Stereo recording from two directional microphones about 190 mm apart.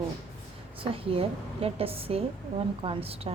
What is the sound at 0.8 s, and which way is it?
A woman's voice, 30° right (ahead or behind).